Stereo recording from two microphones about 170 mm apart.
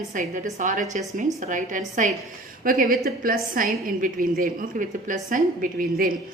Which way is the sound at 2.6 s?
55° right (ahead or behind).